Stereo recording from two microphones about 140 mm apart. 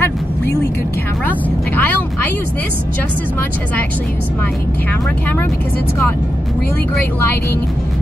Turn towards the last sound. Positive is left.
turn(degrees=15)  # may be behind; listen again after turning